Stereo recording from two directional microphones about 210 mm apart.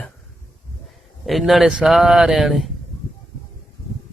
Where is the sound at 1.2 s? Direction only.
Centre (ahead or behind).